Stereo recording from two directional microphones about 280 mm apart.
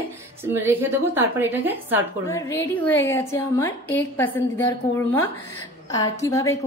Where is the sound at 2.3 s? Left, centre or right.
Centre.